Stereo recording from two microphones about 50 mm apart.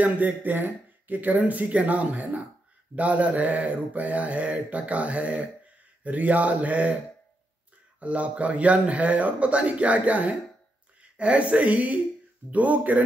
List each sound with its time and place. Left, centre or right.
0.0 s speech: right
3.0 s mantra: right
6.0 s speech: right
8.0 s mantra: right
11.0 s speech: right